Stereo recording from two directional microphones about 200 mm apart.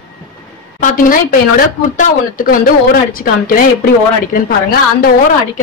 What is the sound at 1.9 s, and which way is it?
Speech, 45° left (ahead or behind).